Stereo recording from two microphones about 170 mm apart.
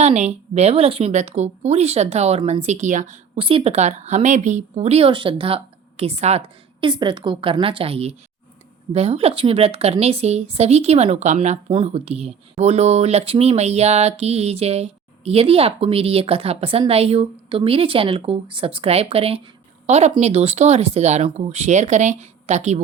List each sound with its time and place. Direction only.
0.0 s a woman's voice: 40° right (ahead or behind)
3.3 s a woman's voice: 30° right (ahead or behind)